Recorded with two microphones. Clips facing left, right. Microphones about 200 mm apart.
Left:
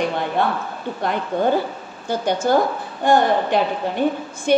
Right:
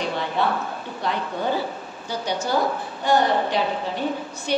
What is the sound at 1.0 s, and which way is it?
A woman's voice, 50° left (ahead or behind).